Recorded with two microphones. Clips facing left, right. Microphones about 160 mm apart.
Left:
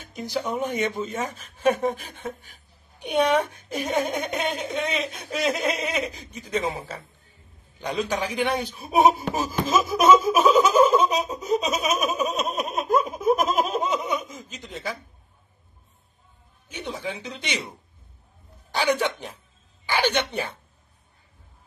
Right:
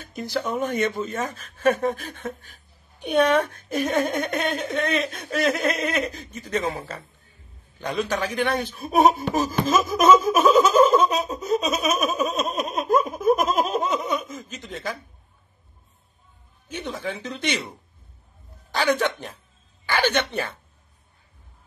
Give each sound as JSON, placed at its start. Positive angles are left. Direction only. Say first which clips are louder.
{"t": 0.1, "sound": "speech", "louder": "right 1 dB", "side_deg": 15}
{"t": 9.3, "sound": "laughter", "louder": "right 2 dB", "side_deg": 10}
{"t": 16.6, "sound": "speech", "louder": "right 2 dB", "side_deg": 10}
{"t": 18.7, "sound": "speech", "louder": "right 1 dB", "side_deg": 10}